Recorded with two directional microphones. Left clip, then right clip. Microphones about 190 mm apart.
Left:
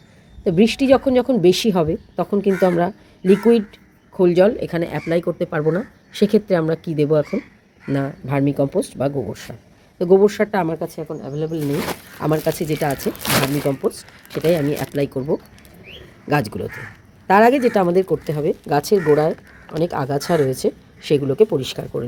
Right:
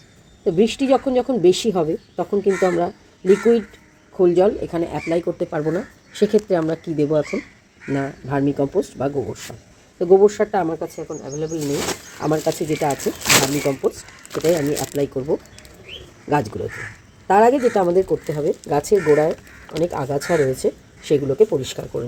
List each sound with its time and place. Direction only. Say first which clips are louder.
0.4 s speech: left 2 dB; 15° left (ahead or behind)
4.7 s speech: left 1 dB; 25° left (ahead or behind)
10.8 s a woman's voice: left 1 dB; 35° left (ahead or behind); by 15.1 s 20° left (ahead or behind)
16.3 s speech: even; 20° left (ahead or behind)